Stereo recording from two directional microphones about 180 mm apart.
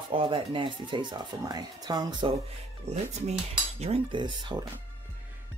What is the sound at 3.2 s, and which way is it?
Cutlery, 35° right (ahead or behind).